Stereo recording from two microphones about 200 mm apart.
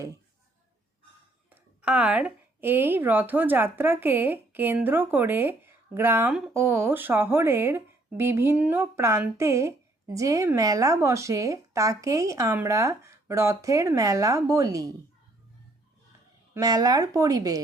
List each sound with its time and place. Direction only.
1.5 s a woman's voice: 5° right (ahead or behind)
16.6 s a woman's voice: 20° right (ahead or behind)